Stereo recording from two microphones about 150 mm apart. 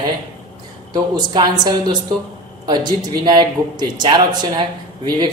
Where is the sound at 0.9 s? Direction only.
30° right (ahead or behind).